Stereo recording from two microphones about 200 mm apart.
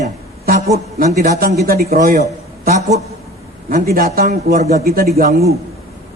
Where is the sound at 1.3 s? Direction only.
50° right (ahead or behind).